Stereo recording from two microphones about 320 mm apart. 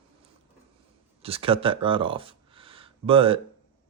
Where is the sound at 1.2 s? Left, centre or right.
Centre.